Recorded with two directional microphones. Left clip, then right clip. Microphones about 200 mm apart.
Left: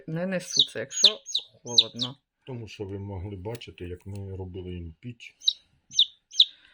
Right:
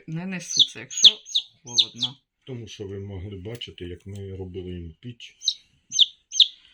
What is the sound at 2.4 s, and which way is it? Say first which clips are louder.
Speech: right 1 dB; 30° left (ahead or behind).